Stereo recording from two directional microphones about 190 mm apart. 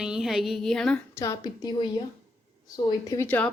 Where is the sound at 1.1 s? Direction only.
15° left (ahead or behind).